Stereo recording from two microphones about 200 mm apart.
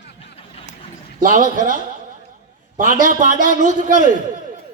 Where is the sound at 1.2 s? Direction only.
40° right (ahead or behind).